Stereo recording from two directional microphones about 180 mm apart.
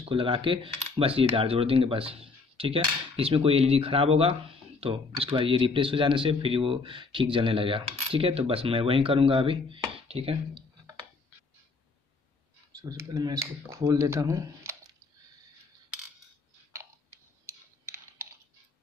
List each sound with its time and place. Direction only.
0.0 s coin: 30° right (ahead or behind)
12.9 s speech: 20° right (ahead or behind)
17.5 s a sound: 10° right (ahead or behind)